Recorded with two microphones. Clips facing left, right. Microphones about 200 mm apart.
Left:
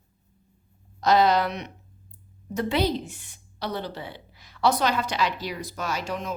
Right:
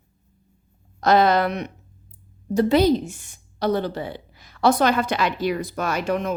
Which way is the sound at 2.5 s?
40° right (ahead or behind).